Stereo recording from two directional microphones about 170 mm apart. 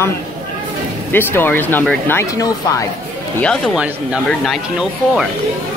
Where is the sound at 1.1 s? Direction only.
10° left (ahead or behind).